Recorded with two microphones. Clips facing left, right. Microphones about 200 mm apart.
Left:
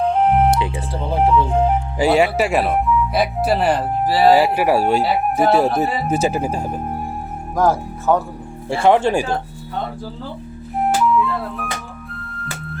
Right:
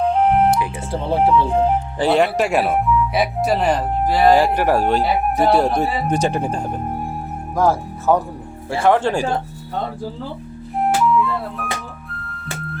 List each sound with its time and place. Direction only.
0.1 s music: centre (ahead or behind)
1.1 s speech: centre (ahead or behind)
8.8 s speech: 25° left (ahead or behind)
10.8 s music: centre (ahead or behind)